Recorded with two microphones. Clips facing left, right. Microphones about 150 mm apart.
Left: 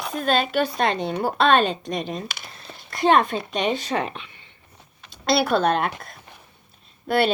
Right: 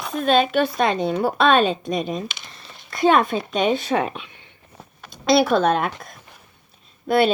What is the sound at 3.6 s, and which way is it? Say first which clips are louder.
Speech: right 4 dB; 50° right (ahead or behind).